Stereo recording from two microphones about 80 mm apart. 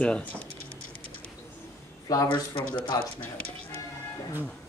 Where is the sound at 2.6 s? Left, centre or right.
Left.